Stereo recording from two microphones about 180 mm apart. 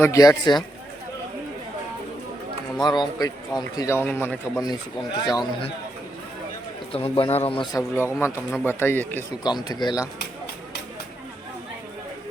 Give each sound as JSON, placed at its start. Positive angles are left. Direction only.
{"t": 0.0, "sound": "a man's voice", "side_deg": 20}
{"t": 2.8, "sound": "a man's voice", "side_deg": 25}
{"t": 6.9, "sound": "a man's voice", "side_deg": 30}
{"t": 9.4, "sound": "a man's voice", "side_deg": 25}